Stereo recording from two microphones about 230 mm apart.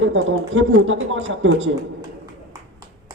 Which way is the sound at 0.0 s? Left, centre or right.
Right.